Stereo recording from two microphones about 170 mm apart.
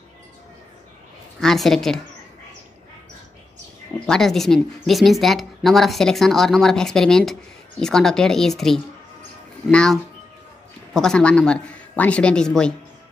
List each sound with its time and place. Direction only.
1.4 s speech: centre (ahead or behind)
4.0 s speech: 5° left (ahead or behind)